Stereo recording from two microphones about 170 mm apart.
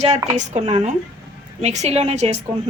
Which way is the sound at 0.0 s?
45° right (ahead or behind).